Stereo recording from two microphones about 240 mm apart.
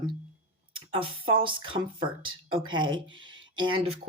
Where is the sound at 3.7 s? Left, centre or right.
Right.